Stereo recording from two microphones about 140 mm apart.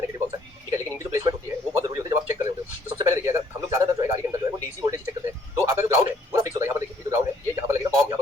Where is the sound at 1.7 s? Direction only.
25° right (ahead or behind).